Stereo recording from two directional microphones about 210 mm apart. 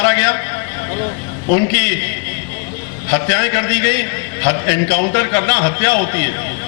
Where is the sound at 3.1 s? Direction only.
15° left (ahead or behind).